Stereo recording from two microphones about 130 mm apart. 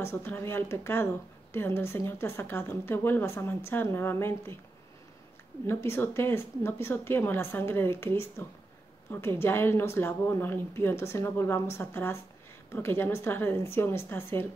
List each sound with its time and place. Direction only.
0.0 s speech: 15° left (ahead or behind)
5.7 s a woman's voice: 20° left (ahead or behind)